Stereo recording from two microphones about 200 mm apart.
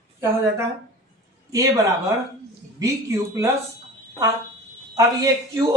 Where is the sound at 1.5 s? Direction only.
15° right (ahead or behind).